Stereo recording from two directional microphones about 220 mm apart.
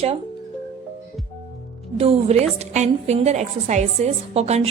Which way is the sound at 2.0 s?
25° right (ahead or behind).